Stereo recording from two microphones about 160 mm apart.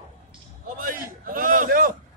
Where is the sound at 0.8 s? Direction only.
60° right (ahead or behind).